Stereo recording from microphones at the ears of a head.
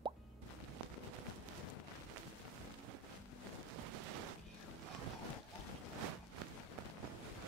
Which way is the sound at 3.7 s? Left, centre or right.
Right.